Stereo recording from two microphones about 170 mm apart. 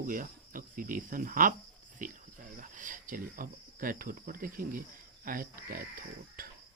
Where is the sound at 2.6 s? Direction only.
50° right (ahead or behind).